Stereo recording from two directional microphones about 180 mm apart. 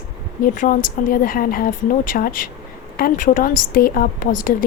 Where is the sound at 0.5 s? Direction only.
45° left (ahead or behind).